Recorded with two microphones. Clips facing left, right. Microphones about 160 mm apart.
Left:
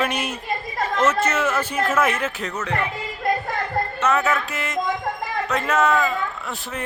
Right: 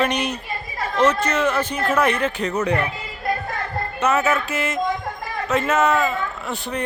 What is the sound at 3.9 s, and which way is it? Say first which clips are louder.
Music: right 2 dB; 5° right (ahead or behind).